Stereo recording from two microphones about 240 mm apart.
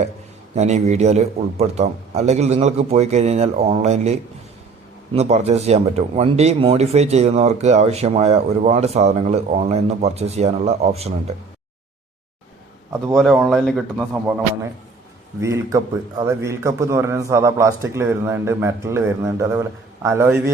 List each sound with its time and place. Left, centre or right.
0.5 s speech: right
13.1 s speech: centre
15.4 s a man's voice: centre